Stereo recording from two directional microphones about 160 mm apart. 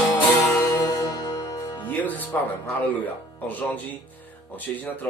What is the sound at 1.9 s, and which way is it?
Speech, 10° left (ahead or behind).